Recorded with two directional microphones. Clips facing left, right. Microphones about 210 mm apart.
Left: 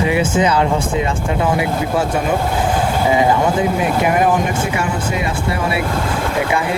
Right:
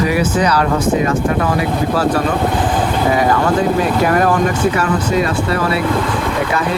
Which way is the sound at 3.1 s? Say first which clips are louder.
Even; 20° left (ahead or behind).